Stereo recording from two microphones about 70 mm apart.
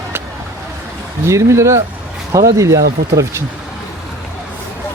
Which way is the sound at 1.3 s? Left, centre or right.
Right.